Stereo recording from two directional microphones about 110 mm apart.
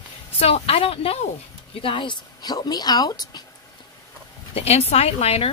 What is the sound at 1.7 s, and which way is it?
Speech, 50° left (ahead or behind).